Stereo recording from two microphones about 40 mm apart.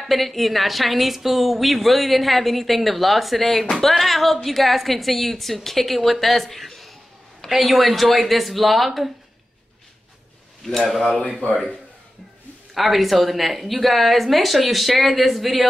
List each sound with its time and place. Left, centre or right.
0.0 s a woman's voice: centre
11.4 s speech: left
12.7 s a woman's voice: centre